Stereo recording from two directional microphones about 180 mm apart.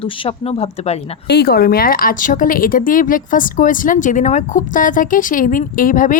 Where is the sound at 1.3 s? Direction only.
60° left (ahead or behind).